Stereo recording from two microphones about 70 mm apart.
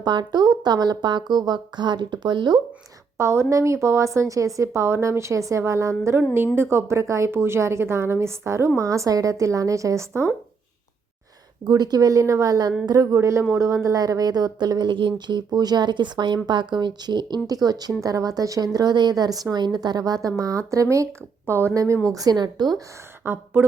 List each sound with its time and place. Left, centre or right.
0.0 s speech: right
3.2 s a woman's voice: right
6.3 s a woman's voice: right
11.6 s speech: right
12.2 s speech: right
13.1 s a woman's voice: right
18.0 s speech: right
21.4 s speech: right
22.1 s speech: right
23.2 s a woman's voice: right